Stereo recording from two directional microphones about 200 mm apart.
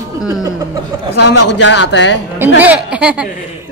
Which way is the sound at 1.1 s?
60° left (ahead or behind).